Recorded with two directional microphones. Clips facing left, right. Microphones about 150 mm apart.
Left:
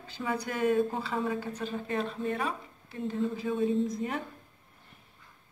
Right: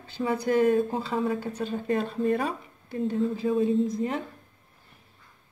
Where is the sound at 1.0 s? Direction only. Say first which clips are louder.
Right 4 dB; 30° right (ahead or behind).